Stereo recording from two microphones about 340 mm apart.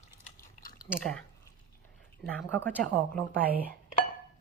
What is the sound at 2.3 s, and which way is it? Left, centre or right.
A woman's voice, centre.